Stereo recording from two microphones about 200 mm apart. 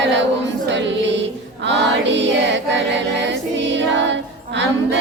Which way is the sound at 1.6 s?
60° right (ahead or behind).